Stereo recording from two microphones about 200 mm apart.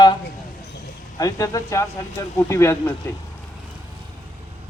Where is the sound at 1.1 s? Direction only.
15° left (ahead or behind).